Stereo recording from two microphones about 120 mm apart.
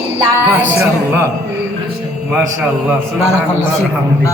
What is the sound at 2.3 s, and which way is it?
Speech, 15° right (ahead or behind).